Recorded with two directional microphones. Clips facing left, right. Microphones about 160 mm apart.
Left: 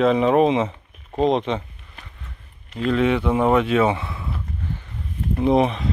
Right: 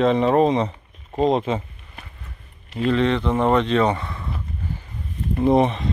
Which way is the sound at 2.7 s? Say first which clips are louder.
Even; centre (ahead or behind).